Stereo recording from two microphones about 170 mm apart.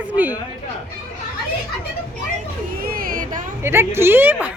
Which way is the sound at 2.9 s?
55° right (ahead or behind).